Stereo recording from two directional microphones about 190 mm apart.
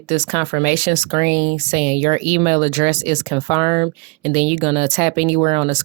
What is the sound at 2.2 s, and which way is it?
Speech, 35° right (ahead or behind).